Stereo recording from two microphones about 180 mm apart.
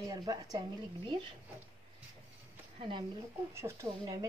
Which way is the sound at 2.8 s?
30° right (ahead or behind).